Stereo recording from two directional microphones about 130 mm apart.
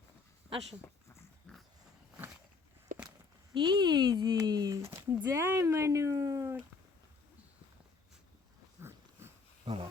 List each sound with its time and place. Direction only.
1.5 s pig: 5° left (ahead or behind)
2.9 s walk: 90° right
3.5 s speech: 35° right (ahead or behind)
8.8 s a sound: 20° right (ahead or behind)
9.7 s speech: 40° right (ahead or behind)